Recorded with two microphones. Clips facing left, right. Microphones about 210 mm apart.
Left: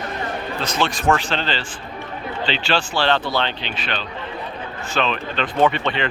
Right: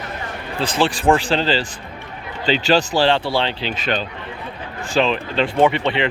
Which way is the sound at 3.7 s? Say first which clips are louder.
Right 5 dB; 45° right (ahead or behind).